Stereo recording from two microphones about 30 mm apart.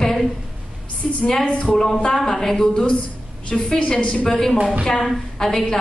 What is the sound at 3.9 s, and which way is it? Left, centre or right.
Speech, left.